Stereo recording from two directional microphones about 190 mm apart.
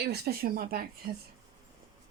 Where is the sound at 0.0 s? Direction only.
55° right (ahead or behind).